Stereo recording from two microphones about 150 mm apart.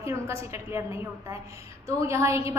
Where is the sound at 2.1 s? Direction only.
20° right (ahead or behind).